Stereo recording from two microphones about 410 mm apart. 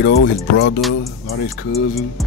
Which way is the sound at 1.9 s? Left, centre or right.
Centre.